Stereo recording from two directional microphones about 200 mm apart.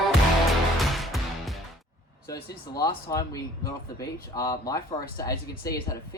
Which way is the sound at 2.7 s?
15° left (ahead or behind).